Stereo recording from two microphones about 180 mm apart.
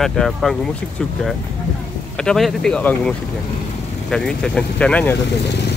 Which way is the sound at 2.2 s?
Centre (ahead or behind).